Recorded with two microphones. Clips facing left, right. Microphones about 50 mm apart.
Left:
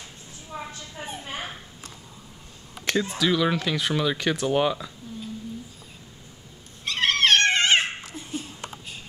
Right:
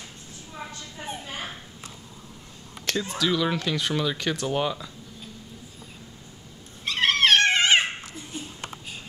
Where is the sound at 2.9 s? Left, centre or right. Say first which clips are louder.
Left 2 dB; centre.